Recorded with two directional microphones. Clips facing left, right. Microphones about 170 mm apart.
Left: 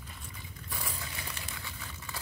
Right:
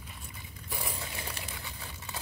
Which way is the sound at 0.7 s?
25° right (ahead or behind).